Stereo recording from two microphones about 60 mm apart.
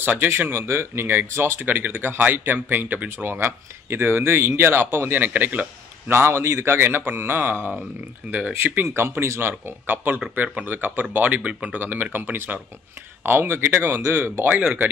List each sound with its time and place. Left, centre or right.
0.4 s speech: right
6.0 s speech: right
8.2 s speech: right
8.6 s speech: right